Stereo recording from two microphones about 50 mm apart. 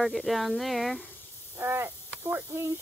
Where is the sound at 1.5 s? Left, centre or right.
Right.